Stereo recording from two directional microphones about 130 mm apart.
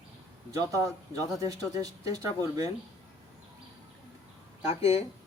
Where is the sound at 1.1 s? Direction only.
25° right (ahead or behind).